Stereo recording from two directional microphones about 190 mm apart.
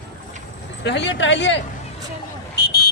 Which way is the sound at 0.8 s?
65° left (ahead or behind).